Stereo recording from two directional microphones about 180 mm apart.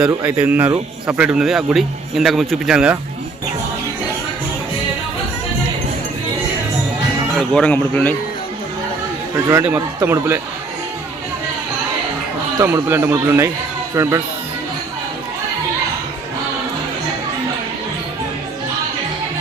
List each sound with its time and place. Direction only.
0.1 s a man's voice: 15° right (ahead or behind)
7.3 s speech: 5° left (ahead or behind)
9.5 s a man's voice: 10° right (ahead or behind)
12.5 s a man's voice: 15° right (ahead or behind)